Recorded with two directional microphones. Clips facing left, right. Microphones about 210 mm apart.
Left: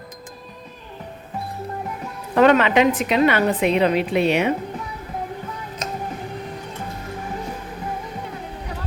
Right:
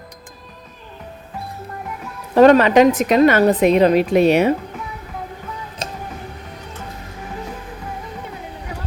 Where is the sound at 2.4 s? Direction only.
40° right (ahead or behind).